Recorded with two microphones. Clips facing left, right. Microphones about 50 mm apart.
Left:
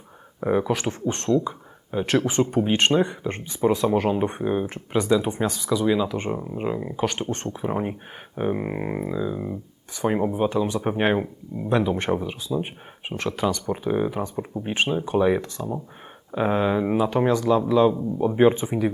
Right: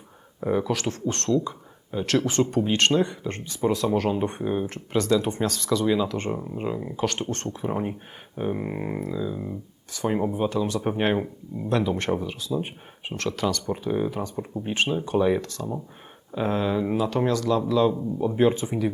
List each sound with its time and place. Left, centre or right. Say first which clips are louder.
0.3 s speech: left 2 dB; left